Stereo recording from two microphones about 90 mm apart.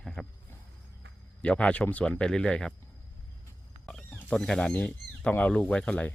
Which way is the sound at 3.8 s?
15° left (ahead or behind).